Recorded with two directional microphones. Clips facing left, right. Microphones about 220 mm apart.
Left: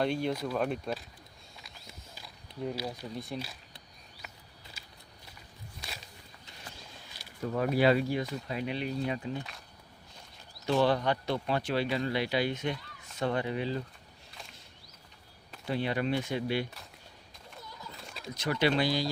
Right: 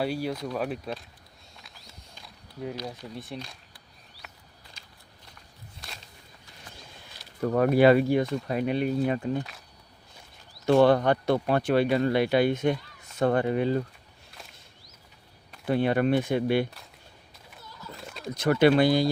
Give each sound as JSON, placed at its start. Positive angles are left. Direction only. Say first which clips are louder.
{"t": 0.0, "sound": "speech", "louder": "right 1 dB", "side_deg": -5}
{"t": 1.5, "sound": "a sound", "louder": "even", "side_deg": 0}
{"t": 2.1, "sound": "speech", "louder": "right 1 dB", "side_deg": 5}
{"t": 4.2, "sound": "a sound", "louder": "even", "side_deg": 0}
{"t": 4.8, "sound": "walk", "louder": "left 1 dB", "side_deg": 5}
{"t": 7.4, "sound": "speech", "louder": "right 7 dB", "side_deg": -60}
{"t": 10.7, "sound": "speech", "louder": "right 7 dB", "side_deg": -55}
{"t": 15.6, "sound": "speech", "louder": "right 7 dB", "side_deg": -55}
{"t": 18.0, "sound": "bird", "louder": "right 5 dB", "side_deg": 0}
{"t": 18.3, "sound": "speech", "louder": "right 8 dB", "side_deg": -55}